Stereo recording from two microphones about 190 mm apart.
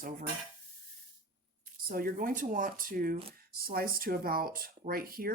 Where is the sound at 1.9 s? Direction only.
50° right (ahead or behind).